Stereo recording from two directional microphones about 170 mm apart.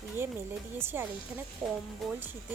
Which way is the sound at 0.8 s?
15° right (ahead or behind).